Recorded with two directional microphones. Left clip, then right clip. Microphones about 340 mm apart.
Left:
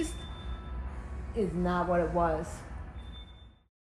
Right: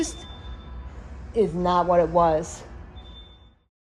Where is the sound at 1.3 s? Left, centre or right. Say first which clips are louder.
Right 10 dB; right.